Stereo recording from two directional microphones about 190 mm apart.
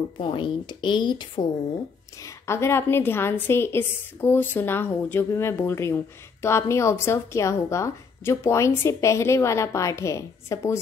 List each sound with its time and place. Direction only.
0.2 s a woman's voice: 25° left (ahead or behind)